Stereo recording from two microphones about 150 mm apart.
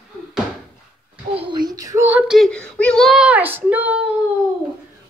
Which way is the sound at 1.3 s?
35° right (ahead or behind).